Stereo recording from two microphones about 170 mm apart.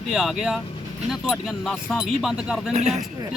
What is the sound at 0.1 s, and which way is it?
Speech, 5° right (ahead or behind).